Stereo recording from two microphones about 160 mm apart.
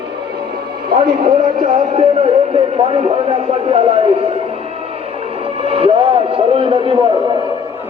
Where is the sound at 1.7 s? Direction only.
35° right (ahead or behind).